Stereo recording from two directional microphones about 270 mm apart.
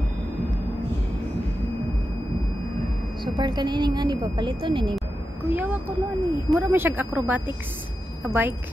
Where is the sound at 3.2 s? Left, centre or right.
Centre.